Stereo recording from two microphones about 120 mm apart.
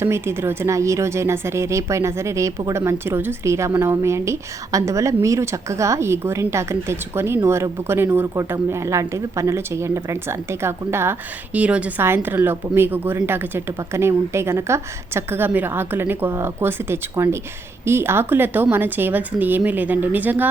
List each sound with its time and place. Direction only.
0.0 s speech: 20° right (ahead or behind)